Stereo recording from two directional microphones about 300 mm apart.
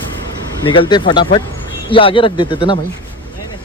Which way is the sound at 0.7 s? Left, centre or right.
Centre.